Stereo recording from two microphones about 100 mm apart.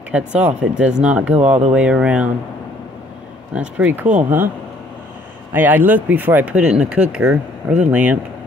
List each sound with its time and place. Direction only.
0.1 s speech: 10° right (ahead or behind)
3.5 s speech: 15° right (ahead or behind)
5.5 s speech: 20° right (ahead or behind)